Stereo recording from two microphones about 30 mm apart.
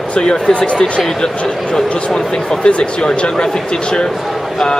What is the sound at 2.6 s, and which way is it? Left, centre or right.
Speech, left.